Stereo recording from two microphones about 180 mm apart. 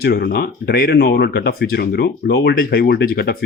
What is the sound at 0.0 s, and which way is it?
Speech, 60° left (ahead or behind).